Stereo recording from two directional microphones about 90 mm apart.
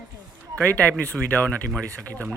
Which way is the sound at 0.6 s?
15° left (ahead or behind).